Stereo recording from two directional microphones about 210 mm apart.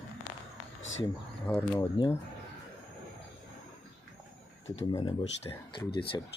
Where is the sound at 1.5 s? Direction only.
5° left (ahead or behind).